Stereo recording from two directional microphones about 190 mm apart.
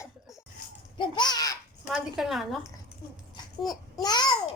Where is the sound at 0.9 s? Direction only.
25° left (ahead or behind).